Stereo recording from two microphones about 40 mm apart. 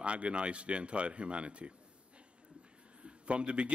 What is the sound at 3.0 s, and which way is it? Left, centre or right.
Speech, right.